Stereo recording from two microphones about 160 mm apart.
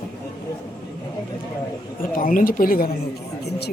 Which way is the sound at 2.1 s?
60° left (ahead or behind).